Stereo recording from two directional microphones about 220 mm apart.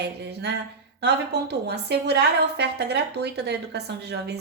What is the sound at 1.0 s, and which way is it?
A woman's voice, 50° right (ahead or behind).